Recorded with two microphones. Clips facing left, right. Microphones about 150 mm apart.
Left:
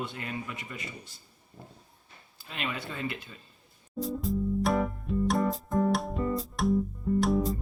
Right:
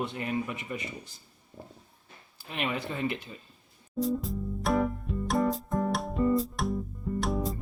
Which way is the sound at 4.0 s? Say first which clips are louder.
Even; centre (ahead or behind).